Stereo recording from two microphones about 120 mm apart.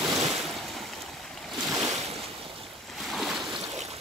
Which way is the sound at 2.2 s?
50° right (ahead or behind).